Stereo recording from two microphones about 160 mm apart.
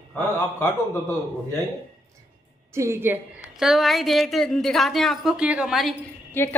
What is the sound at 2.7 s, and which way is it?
Speech, 15° right (ahead or behind).